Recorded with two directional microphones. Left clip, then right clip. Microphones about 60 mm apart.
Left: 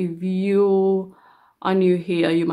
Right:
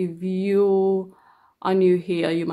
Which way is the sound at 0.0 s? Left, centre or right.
Right.